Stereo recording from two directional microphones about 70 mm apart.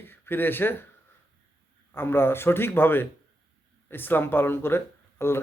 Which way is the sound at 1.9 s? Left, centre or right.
Left.